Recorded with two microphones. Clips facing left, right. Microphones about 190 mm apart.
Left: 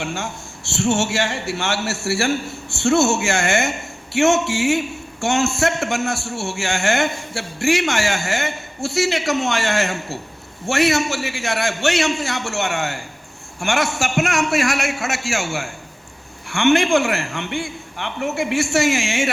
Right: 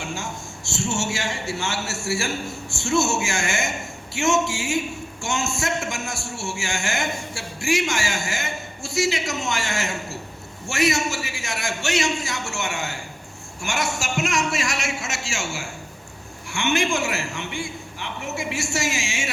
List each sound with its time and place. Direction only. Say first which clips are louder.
0.0 s a man's voice: left 4 dB; 60° left (ahead or behind)